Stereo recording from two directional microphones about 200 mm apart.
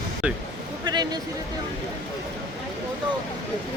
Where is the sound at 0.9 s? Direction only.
20° right (ahead or behind).